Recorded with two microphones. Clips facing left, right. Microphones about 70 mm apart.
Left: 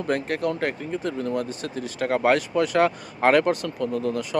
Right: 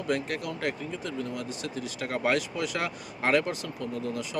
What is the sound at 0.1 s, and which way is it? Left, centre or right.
Speech, left.